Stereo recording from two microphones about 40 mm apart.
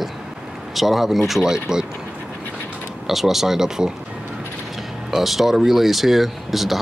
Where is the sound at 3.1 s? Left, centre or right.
Centre.